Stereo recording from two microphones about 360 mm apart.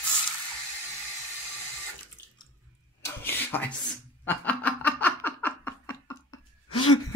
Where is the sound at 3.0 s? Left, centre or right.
Centre.